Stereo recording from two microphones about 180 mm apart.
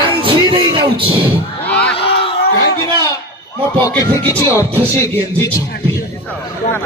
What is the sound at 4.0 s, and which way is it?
Music, 20° left (ahead or behind).